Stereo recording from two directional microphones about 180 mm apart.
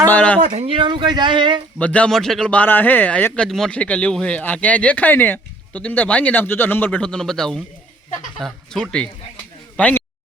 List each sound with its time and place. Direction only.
0.1 s a man's voice: 10° left (ahead or behind)
0.4 s speech: 35° right (ahead or behind)
1.8 s a man's voice: 5° left (ahead or behind)